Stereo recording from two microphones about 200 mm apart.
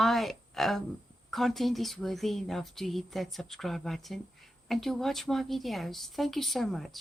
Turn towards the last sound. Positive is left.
turn(degrees=0)  # may be behind; listen again after turning